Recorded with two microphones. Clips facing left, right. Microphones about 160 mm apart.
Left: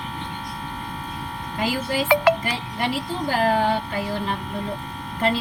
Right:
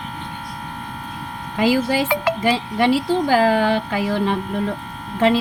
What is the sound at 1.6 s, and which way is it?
Speech, 90° right.